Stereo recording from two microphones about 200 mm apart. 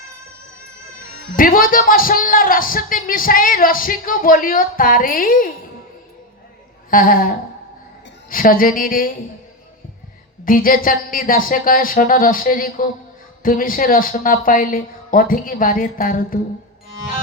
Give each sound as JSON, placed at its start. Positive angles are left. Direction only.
{"t": 1.4, "sound": "speech", "side_deg": 45}
{"t": 6.9, "sound": "speech", "side_deg": 45}
{"t": 10.4, "sound": "speech", "side_deg": 45}